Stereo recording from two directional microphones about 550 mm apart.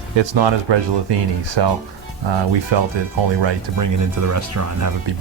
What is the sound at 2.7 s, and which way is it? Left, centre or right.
Speech, right.